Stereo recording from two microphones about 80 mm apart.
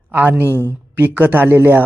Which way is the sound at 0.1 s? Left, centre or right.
Right.